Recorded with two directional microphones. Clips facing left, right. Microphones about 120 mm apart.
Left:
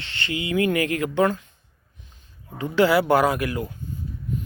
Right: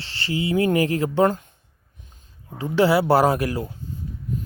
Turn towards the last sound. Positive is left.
turn(degrees=-30)  # may be behind; listen again after turning